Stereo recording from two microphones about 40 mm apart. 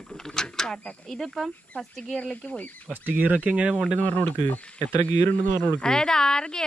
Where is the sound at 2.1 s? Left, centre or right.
Centre.